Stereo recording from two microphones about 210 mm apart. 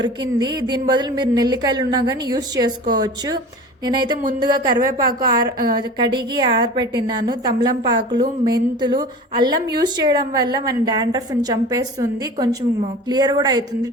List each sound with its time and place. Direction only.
0.0 s a woman's voice: 20° right (ahead or behind)